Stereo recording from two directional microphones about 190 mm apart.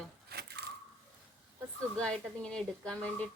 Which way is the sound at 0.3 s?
60° right (ahead or behind).